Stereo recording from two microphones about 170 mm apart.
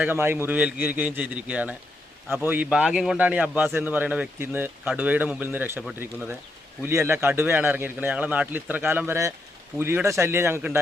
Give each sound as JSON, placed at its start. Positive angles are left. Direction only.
{"t": 0.0, "sound": "speech", "side_deg": -10}